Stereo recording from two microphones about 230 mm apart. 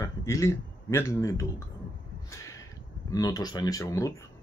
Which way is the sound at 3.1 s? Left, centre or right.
Centre.